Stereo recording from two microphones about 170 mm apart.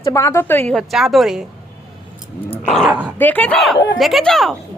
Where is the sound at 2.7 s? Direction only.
Centre (ahead or behind).